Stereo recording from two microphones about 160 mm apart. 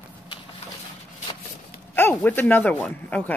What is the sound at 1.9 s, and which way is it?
Speech, 10° left (ahead or behind).